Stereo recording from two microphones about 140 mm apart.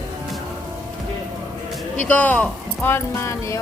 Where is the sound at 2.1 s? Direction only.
10° left (ahead or behind).